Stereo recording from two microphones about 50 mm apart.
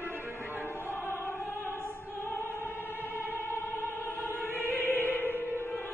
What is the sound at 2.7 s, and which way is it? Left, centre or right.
Music, left.